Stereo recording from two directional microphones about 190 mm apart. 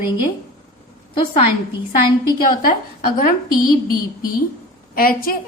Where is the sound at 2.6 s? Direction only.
45° left (ahead or behind).